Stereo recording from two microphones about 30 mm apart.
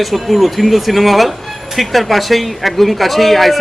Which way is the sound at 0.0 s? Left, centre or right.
Centre.